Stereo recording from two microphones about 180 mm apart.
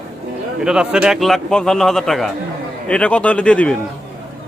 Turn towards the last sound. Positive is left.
turn(degrees=5)  # may be behind; listen again after turning